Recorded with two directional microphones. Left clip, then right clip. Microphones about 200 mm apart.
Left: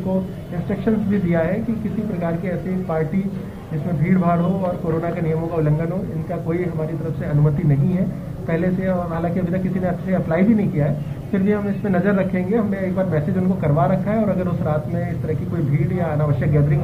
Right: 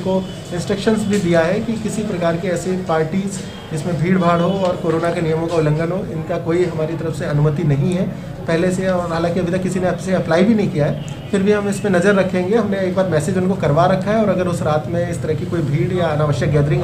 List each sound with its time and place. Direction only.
0.7 s a man's voice: 15° right (ahead or behind)
4.0 s a man's voice: 10° right (ahead or behind)
5.6 s a man's voice: 10° right (ahead or behind)
8.5 s a man's voice: 10° right (ahead or behind)
16.0 s a man's voice: 10° right (ahead or behind)